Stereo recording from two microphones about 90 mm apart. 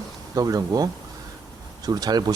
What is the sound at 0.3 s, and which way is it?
Speech, 45° right (ahead or behind).